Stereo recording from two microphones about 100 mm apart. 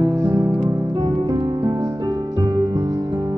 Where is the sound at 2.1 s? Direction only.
40° right (ahead or behind).